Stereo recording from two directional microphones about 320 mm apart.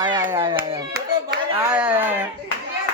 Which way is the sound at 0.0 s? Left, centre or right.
Centre.